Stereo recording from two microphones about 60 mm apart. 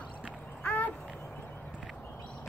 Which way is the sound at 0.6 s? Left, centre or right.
Left.